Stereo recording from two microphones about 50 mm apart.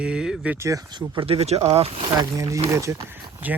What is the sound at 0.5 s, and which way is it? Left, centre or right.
Speech, right.